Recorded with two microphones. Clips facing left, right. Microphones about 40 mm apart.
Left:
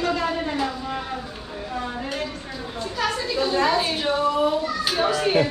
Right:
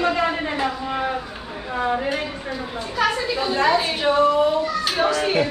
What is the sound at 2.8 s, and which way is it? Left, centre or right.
A woman's voice, centre.